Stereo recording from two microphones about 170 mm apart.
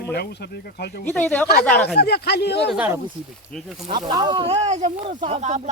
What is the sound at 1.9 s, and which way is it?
Speech, 75° left (ahead or behind).